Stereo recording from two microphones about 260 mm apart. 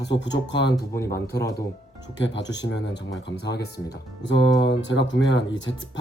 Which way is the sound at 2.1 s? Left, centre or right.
Left.